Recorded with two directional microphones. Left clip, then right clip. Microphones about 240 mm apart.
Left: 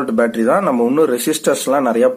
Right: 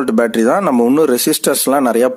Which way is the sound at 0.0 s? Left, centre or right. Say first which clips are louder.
Right 2 dB; right.